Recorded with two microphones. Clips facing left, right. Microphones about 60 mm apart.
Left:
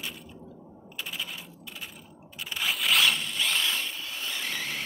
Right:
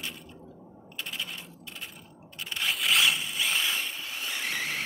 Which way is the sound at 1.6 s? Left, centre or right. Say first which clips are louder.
Left 1 dB; centre.